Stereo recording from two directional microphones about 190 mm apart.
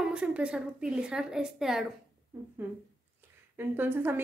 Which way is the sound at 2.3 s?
15° right (ahead or behind).